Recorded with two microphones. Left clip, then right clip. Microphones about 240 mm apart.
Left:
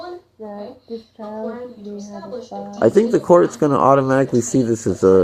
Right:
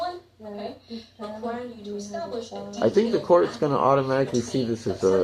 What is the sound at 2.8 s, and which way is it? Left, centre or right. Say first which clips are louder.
Speech: left 7 dB; left.